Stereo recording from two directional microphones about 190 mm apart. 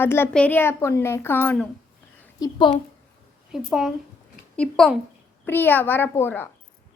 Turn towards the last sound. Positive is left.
turn(degrees=10)  # may be behind; listen again after turning